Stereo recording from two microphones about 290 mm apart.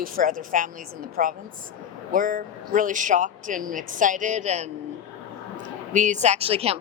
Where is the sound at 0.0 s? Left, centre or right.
Right.